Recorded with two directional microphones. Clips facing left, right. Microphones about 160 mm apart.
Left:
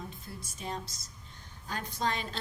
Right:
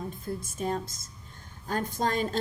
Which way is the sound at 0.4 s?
50° right (ahead or behind).